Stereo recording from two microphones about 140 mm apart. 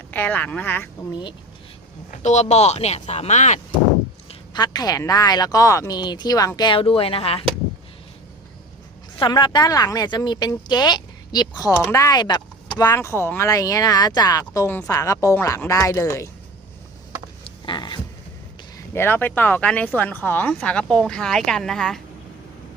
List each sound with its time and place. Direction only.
0.1 s speech: 10° left (ahead or behind)
2.0 s speech: 55° left (ahead or behind)
4.5 s speech: 30° left (ahead or behind)
9.1 s speech: 30° left (ahead or behind)
17.7 s a sound: 35° left (ahead or behind)
18.9 s speech: 15° left (ahead or behind)